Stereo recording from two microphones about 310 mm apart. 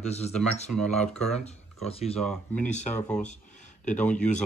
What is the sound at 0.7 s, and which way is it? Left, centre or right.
Speech, centre.